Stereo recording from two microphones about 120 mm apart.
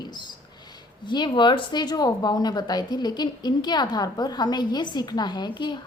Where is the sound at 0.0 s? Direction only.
35° left (ahead or behind).